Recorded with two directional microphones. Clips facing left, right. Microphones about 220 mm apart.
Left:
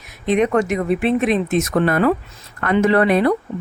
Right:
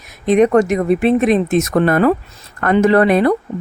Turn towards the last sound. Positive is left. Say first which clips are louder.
# right 3 dB
turn(degrees=-45)  # may be behind; listen again after turning